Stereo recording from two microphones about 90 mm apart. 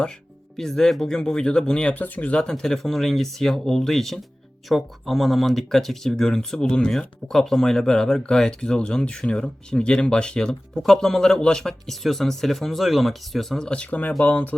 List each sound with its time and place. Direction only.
0.5 s speech: 5° left (ahead or behind)